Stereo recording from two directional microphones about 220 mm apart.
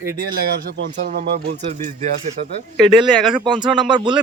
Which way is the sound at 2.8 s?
Centre (ahead or behind).